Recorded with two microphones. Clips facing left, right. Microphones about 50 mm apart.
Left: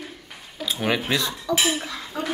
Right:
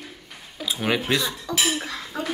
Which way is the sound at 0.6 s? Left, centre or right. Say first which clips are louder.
Even; centre.